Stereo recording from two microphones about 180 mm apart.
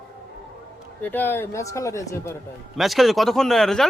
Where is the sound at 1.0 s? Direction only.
10° left (ahead or behind).